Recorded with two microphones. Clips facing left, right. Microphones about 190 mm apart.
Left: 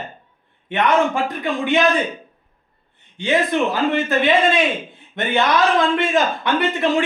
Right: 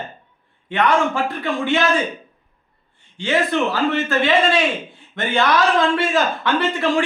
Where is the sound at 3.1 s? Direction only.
20° left (ahead or behind).